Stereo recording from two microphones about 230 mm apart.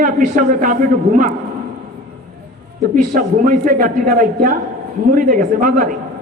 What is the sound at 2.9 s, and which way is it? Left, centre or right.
A man's voice, right.